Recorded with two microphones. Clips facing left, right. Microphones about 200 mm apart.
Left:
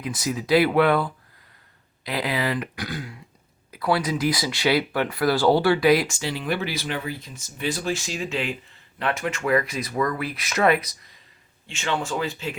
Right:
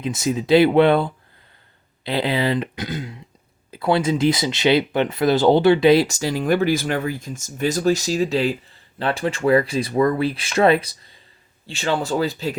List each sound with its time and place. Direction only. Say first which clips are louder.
0.0 s speech: right 5 dB; 25° right (ahead or behind)
6.1 s speech: right 7 dB; 40° right (ahead or behind)